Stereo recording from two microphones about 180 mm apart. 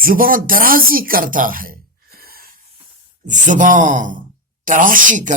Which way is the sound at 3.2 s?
45° right (ahead or behind).